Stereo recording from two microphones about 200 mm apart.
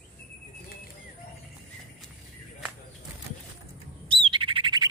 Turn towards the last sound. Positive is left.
turn(degrees=-25)  # may be behind; listen again after turning